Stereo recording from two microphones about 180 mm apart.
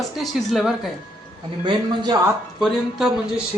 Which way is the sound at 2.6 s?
Centre (ahead or behind).